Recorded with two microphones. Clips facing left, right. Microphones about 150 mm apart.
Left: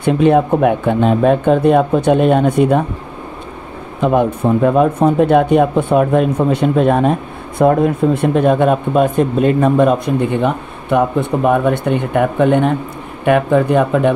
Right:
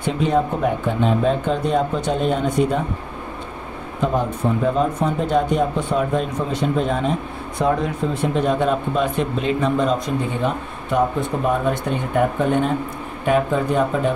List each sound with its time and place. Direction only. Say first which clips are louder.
0.0 s speech: left 8 dB; 60° left (ahead or behind)
4.1 s speech: left 9 dB; 65° left (ahead or behind)